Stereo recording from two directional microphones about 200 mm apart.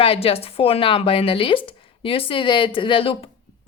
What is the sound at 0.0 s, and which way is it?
A woman's voice, 25° left (ahead or behind).